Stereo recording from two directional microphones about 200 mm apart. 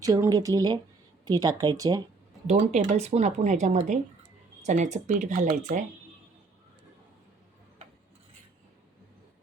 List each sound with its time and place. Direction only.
0.0 s speech: 20° right (ahead or behind)
2.5 s speech: 35° right (ahead or behind)